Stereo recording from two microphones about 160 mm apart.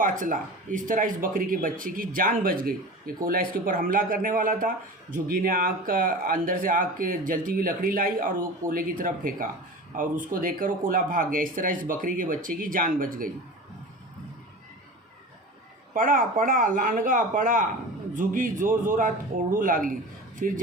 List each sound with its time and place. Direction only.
0.0 s speech: 55° right (ahead or behind)
16.0 s speech: 60° right (ahead or behind)